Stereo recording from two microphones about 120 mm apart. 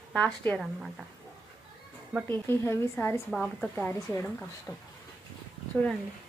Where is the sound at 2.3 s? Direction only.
20° left (ahead or behind).